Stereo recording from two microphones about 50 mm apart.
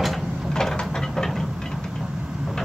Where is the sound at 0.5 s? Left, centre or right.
Centre.